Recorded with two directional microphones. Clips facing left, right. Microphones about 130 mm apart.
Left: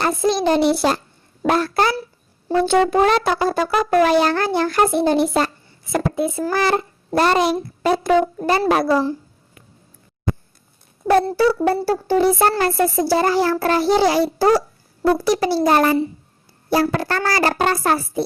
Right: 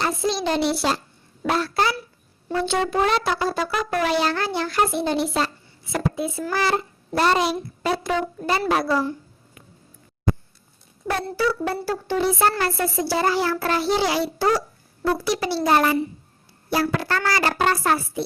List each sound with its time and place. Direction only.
0.0 s brass instrument: 50° left (ahead or behind)
11.1 s speech: 40° left (ahead or behind)